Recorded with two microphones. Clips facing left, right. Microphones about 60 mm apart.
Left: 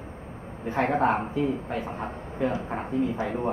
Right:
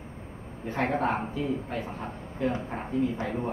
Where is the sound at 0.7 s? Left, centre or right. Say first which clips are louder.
Left 4 dB; centre.